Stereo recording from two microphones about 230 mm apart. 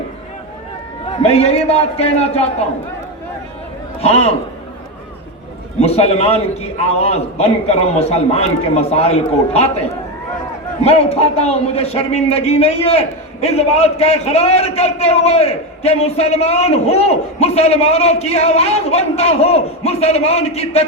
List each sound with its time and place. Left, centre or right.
1.2 s a man's voice: left
4.0 s a man's voice: left
5.8 s a man's voice: left
10.8 s a man's voice: left